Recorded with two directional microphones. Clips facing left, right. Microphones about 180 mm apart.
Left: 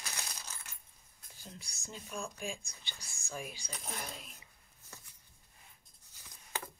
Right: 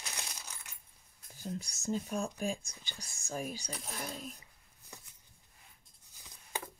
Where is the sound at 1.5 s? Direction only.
40° right (ahead or behind).